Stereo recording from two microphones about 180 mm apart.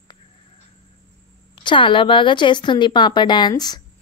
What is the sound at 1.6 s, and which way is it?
A woman's voice, 25° left (ahead or behind).